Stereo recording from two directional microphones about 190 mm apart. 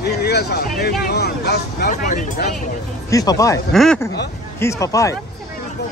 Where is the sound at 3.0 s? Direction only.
15° left (ahead or behind).